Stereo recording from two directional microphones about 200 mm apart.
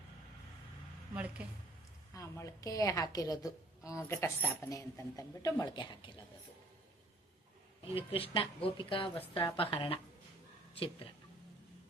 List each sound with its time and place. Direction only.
1.1 s speech: 5° right (ahead or behind)
2.1 s a woman's voice: 15° left (ahead or behind)
7.9 s speech: 30° left (ahead or behind)